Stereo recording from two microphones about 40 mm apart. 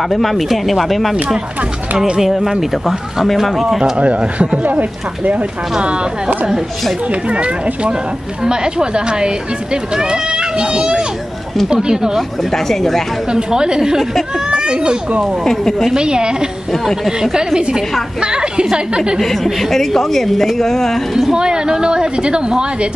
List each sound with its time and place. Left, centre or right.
0.1 s speech: centre
2.2 s speech: centre
3.9 s speech: right
4.6 s speech: right
5.8 s speech: right
12.2 s a woman's voice: centre
13.3 s speech: right
14.5 s children playing: right
15.4 s a woman's voice: centre
15.9 s speech: right
16.8 s speech: centre
17.2 s a woman's voice: centre
19.1 s a woman's voice: centre
21.3 s speech: centre